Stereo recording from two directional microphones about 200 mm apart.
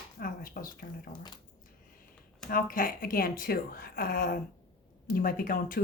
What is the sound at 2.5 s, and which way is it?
Speech, 45° left (ahead or behind).